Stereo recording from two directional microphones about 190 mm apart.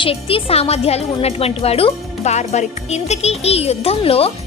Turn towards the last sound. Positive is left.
turn(degrees=30)  # may be behind; listen again after turning